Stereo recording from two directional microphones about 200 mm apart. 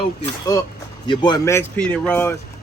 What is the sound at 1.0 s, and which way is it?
Speech, 25° left (ahead or behind).